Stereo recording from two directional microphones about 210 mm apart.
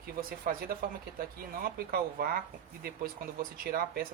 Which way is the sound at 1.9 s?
45° right (ahead or behind).